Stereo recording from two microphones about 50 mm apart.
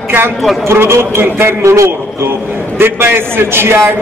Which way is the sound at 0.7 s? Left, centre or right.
Right.